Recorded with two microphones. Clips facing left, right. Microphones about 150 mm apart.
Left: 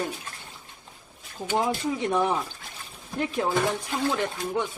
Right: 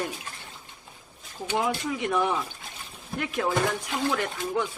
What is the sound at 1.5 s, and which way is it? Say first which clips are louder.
Speech: left 2 dB; 30° left (ahead or behind).